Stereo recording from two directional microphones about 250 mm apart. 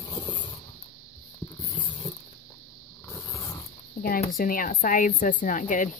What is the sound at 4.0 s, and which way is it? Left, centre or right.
A woman's voice, left.